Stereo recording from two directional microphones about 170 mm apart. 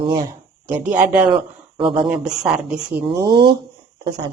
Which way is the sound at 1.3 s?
30° right (ahead or behind).